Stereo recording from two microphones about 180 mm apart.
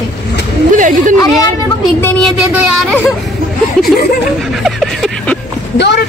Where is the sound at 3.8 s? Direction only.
5° left (ahead or behind).